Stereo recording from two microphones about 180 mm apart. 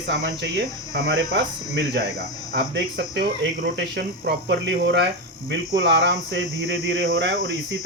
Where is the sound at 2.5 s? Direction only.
70° right (ahead or behind).